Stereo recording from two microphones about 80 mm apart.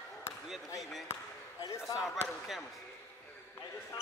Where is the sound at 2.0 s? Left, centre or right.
Centre.